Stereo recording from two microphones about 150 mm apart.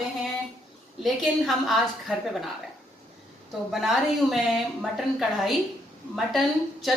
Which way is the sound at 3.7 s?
Centre (ahead or behind).